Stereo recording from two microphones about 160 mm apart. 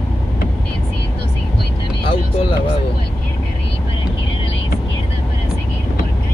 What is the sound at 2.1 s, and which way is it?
Speech, 40° left (ahead or behind).